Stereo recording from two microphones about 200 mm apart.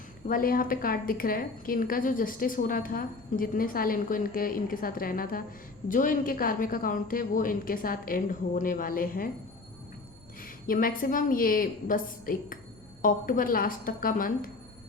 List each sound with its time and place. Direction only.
0.3 s a woman's voice: 45° left (ahead or behind)
10.4 s a woman's voice: 45° left (ahead or behind)